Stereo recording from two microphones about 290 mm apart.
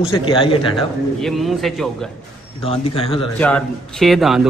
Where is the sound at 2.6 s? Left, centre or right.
Centre.